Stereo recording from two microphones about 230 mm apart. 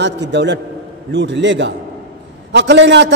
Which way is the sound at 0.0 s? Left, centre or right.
Right.